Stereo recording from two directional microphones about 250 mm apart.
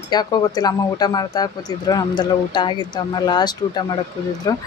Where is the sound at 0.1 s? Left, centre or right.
Centre.